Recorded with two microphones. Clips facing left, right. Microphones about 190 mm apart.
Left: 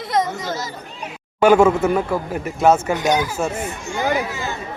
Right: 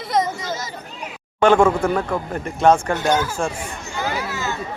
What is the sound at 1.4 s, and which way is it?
Speech, 5° left (ahead or behind).